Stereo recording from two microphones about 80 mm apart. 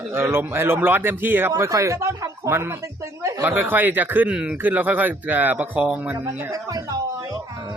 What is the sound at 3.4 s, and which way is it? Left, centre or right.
Speech, right.